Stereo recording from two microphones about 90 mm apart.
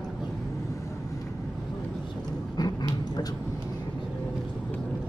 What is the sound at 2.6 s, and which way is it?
Dog, 50° left (ahead or behind).